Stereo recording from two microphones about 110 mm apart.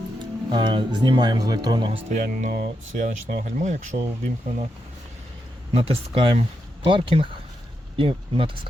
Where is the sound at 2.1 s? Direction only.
90° right.